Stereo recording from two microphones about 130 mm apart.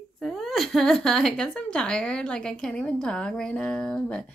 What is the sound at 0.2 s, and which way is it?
Speech, centre (ahead or behind).